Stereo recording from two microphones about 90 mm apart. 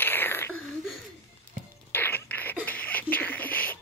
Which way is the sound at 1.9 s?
20° left (ahead or behind).